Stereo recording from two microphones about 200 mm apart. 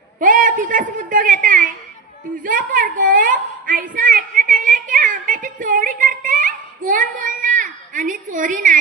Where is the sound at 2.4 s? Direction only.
45° right (ahead or behind).